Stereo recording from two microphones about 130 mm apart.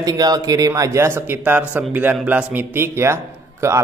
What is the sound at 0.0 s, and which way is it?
A man's voice, 30° right (ahead or behind).